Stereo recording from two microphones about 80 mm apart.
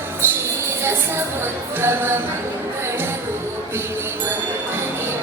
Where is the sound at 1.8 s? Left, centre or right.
Right.